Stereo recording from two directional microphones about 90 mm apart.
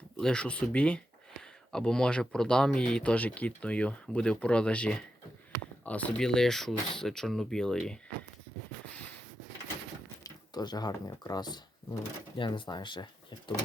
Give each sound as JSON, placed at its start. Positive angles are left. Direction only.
{"t": 0.2, "sound": "speech", "side_deg": 10}
{"t": 10.2, "sound": "speech", "side_deg": 50}
{"t": 12.4, "sound": "speech", "side_deg": 60}